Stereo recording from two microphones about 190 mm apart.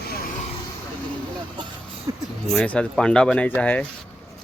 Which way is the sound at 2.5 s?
5° left (ahead or behind).